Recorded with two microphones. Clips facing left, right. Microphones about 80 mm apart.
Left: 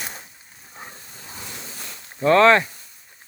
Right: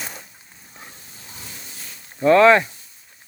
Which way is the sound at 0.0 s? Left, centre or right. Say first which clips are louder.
Even; centre.